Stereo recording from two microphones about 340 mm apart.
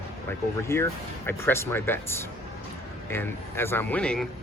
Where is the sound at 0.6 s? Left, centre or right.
Centre.